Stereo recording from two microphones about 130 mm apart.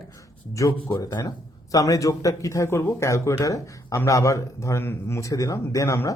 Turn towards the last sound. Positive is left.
turn(degrees=25)  # may be behind; listen again after turning